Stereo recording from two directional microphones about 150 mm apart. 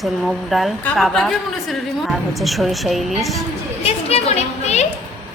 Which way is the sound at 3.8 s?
45° left (ahead or behind).